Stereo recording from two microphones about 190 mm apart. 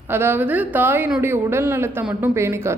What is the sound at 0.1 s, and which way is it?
Speech, 10° right (ahead or behind).